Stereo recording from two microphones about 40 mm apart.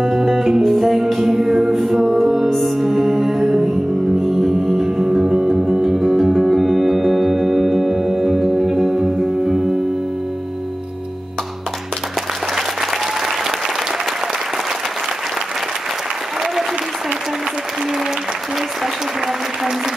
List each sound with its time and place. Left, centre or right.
0.0 s music: centre
12.5 s applause: centre